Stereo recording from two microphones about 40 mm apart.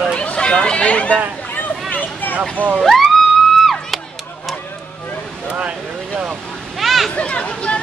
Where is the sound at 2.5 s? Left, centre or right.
Right.